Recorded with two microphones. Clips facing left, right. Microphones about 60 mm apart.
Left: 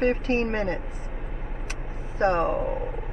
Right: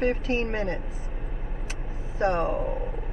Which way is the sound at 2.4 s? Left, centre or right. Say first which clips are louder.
Left 2 dB; centre.